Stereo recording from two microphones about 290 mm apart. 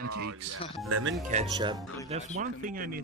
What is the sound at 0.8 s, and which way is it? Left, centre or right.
Speech, right.